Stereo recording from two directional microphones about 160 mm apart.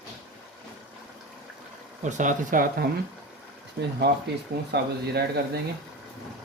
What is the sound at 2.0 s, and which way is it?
Speech, 50° right (ahead or behind).